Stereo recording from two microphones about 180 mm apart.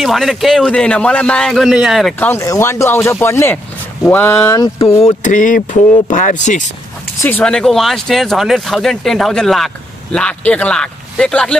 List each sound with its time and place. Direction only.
0.0 s speech: centre (ahead or behind)
2.1 s speech: 15° left (ahead or behind)
5.0 s speech: 45° left (ahead or behind)
7.2 s speech: 10° left (ahead or behind)